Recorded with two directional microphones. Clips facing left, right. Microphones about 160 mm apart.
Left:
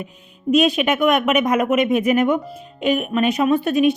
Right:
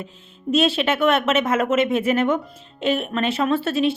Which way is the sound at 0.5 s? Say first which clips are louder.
Left 3 dB; 15° left (ahead or behind).